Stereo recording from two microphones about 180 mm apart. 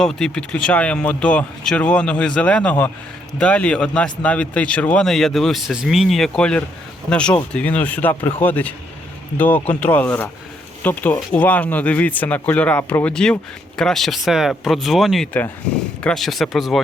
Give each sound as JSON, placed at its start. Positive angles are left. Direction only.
{"t": 0.0, "sound": "speech", "side_deg": 5}